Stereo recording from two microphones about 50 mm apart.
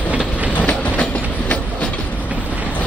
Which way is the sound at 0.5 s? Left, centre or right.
Left.